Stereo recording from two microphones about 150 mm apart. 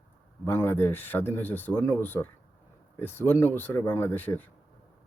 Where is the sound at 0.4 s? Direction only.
15° left (ahead or behind).